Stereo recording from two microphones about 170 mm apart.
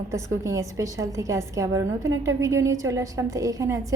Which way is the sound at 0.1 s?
20° right (ahead or behind).